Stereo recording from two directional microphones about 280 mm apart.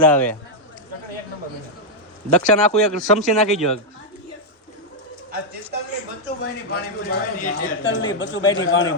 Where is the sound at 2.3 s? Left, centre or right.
Left.